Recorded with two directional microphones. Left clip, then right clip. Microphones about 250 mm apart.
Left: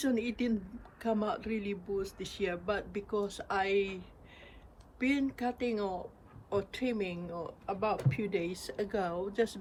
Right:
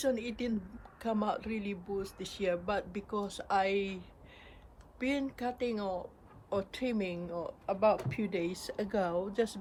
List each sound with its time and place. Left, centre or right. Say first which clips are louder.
0.0 s speech: even; centre